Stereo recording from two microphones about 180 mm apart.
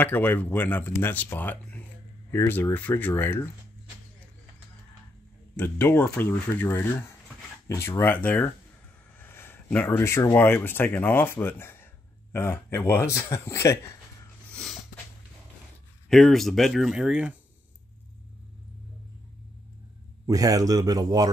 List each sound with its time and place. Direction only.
0.0 s speech: 10° left (ahead or behind)
5.6 s speech: 10° left (ahead or behind)
16.1 s speech: centre (ahead or behind)
20.2 s speech: 20° right (ahead or behind)